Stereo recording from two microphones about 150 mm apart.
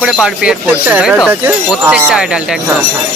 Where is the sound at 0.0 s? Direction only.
5° right (ahead or behind).